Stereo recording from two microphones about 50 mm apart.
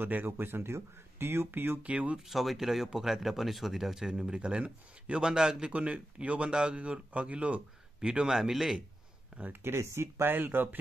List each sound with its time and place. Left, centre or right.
0.0 s speech: right
1.8 s speech: right
2.2 s speech: centre
4.1 s speech: centre
5.2 s a man's voice: centre
5.7 s speech: right
8.4 s speech: centre
9.6 s speech: right
10.2 s speech: right